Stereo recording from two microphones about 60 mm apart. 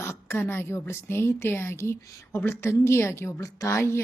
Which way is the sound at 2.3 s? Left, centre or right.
Left.